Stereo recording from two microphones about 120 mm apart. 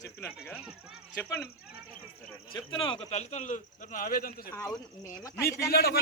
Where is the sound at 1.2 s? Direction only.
20° left (ahead or behind).